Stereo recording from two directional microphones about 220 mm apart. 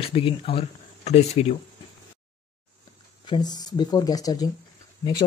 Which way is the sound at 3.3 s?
20° left (ahead or behind).